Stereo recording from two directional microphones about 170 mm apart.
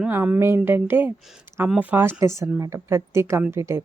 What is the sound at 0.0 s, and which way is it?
Speech, 10° right (ahead or behind).